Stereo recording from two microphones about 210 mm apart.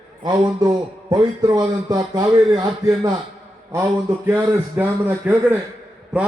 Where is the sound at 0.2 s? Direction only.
20° right (ahead or behind).